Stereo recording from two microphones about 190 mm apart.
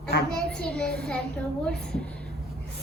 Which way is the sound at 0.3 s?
5° left (ahead or behind).